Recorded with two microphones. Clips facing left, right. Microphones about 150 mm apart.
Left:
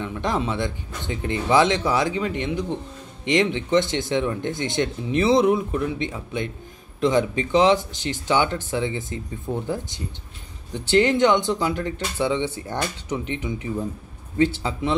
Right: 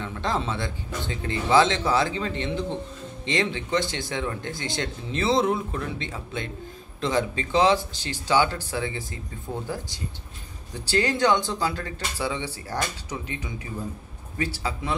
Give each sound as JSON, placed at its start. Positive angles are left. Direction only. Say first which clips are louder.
{"t": 0.0, "sound": "speech", "louder": "left 3 dB", "side_deg": 15}